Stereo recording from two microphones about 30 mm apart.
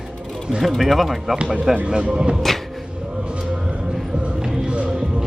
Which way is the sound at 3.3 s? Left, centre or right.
Right.